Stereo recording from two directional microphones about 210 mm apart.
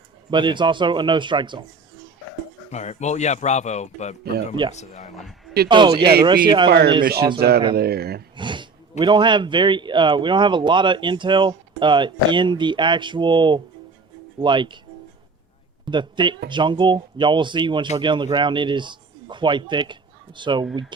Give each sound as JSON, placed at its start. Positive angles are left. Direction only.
{"t": 0.3, "sound": "speech", "side_deg": -20}
{"t": 2.6, "sound": "speech", "side_deg": 35}
{"t": 4.2, "sound": "speech", "side_deg": -50}
{"t": 4.7, "sound": "speech", "side_deg": 35}
{"t": 5.1, "sound": "speech", "side_deg": 0}
{"t": 5.6, "sound": "speech", "side_deg": -20}
{"t": 6.7, "sound": "speech", "side_deg": -50}
{"t": 8.4, "sound": "speech", "side_deg": -20}
{"t": 15.9, "sound": "speech", "side_deg": -20}